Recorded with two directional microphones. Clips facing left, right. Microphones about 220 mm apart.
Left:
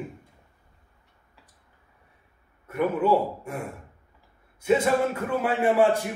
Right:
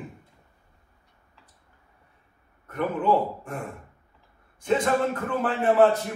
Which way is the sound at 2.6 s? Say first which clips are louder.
Left 1 dB; 10° left (ahead or behind).